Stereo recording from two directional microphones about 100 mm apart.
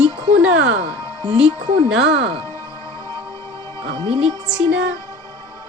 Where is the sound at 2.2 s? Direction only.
90° right.